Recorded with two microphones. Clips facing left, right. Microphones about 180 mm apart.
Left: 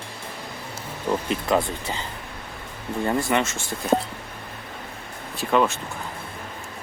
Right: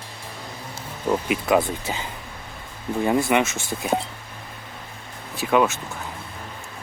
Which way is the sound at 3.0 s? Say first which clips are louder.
Right 3 dB; 10° right (ahead or behind).